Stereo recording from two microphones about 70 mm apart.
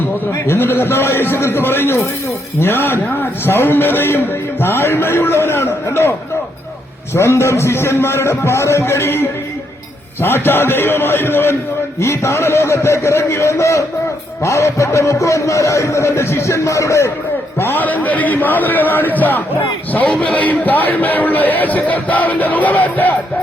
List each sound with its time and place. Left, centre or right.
0.4 s a man's voice: left
17.6 s a man's voice: left